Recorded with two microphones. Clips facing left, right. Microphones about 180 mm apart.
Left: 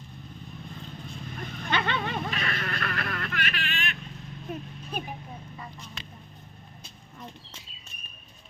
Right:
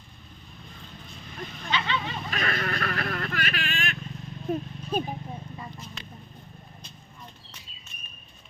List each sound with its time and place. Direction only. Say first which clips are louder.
1.7 s vehicle: left 1 dB; 55° left (ahead or behind)
2.3 s vehicle: right 3 dB; 45° right (ahead or behind)
4.4 s speech: right 8 dB; 30° right (ahead or behind)